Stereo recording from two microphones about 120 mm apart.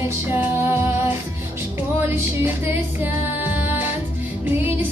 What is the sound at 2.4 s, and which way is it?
Music, 15° right (ahead or behind).